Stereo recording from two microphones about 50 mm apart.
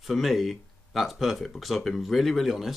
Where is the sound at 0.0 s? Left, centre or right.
Centre.